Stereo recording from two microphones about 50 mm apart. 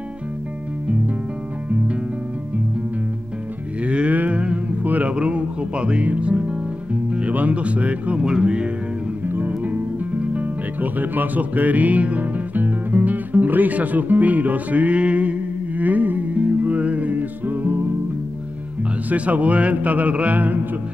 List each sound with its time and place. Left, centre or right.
3.8 s cattle: right
5.1 s music: right
7.3 s speech: right
8.2 s speech: centre
9.2 s music: right
19.0 s speech: right